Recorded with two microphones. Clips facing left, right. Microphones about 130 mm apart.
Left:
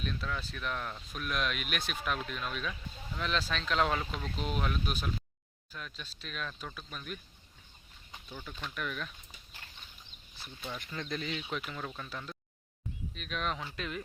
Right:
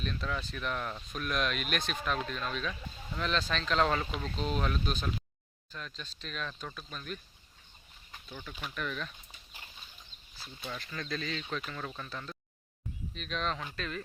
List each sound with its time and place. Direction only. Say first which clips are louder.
0.0 s speech: right 1 dB; 5° left (ahead or behind)
8.3 s speech: even; 10° left (ahead or behind)
10.7 s speech: even; 20° left (ahead or behind)